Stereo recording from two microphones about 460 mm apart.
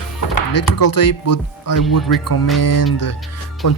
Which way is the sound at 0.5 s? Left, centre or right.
Left.